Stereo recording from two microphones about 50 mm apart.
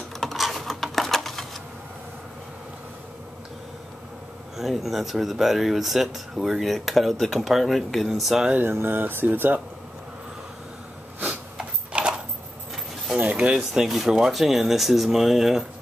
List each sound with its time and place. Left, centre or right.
0.2 s computer keyboard: centre
4.6 s speech: centre
8.5 s speech: right
11.5 s a sound: centre
13.2 s a sound: right
13.5 s speech: centre